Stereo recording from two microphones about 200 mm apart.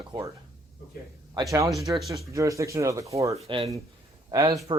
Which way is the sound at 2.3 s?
15° right (ahead or behind).